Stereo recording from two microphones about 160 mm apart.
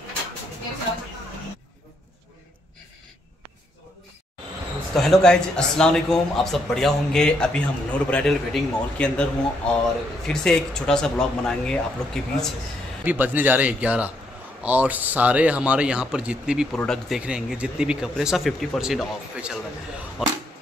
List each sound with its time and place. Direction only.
4.9 s a man's voice: 5° left (ahead or behind)
13.0 s a man's voice: 10° right (ahead or behind)